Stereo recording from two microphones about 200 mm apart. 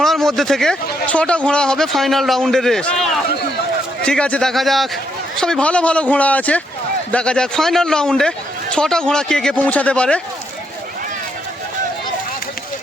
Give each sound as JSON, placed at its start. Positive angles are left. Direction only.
{"t": 0.0, "sound": "a man's voice", "side_deg": 0}